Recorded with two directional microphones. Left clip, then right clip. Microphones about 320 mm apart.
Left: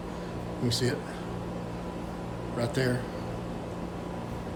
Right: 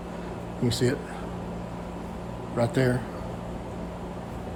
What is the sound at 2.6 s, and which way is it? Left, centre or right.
Speech, centre.